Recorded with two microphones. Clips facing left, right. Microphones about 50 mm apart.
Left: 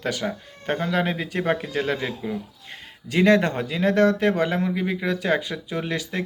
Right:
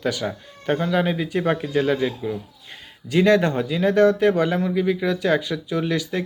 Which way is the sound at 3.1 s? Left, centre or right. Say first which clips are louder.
Right 1 dB; left.